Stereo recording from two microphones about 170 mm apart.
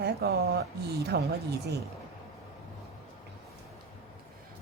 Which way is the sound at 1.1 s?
90° right.